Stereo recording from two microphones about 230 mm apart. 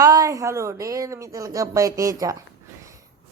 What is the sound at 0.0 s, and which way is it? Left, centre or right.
A woman's voice, centre.